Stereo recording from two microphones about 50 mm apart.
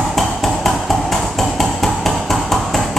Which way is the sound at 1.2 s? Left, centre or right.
Centre.